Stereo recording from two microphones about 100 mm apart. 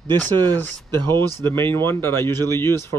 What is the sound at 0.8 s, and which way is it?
Speech, 45° right (ahead or behind).